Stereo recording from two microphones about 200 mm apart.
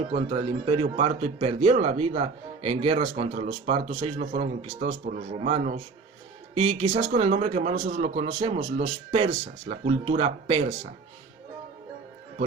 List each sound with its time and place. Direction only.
0.1 s speech: 30° right (ahead or behind)